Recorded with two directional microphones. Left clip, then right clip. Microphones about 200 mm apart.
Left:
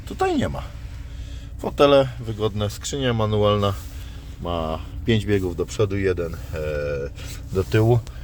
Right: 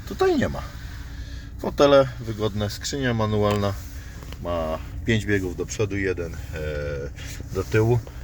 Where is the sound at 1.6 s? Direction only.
Centre (ahead or behind).